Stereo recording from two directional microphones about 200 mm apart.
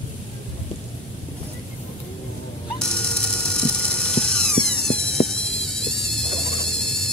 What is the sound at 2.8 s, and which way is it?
Ratchet, 5° left (ahead or behind).